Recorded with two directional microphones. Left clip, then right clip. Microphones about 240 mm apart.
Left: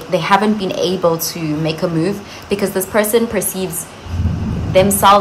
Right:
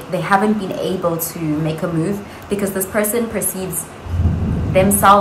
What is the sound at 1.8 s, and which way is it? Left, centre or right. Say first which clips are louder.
A woman's voice: left 3 dB; centre.